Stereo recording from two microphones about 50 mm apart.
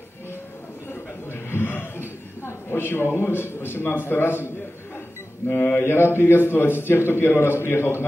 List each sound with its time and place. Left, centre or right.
1.3 s chuckle: left
5.8 s a man's voice: left